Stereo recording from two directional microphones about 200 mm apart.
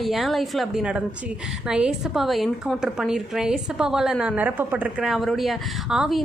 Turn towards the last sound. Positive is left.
turn(degrees=0)  # may be behind; listen again after turning